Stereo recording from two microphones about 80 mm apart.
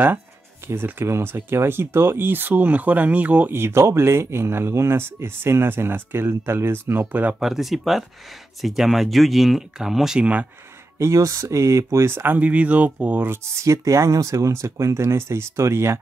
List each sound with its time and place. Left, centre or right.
0.7 s speech: right
3.5 s speech: right
7.3 s speech: centre
11.0 s speech: right
12.3 s speech: centre
13.3 s speech: right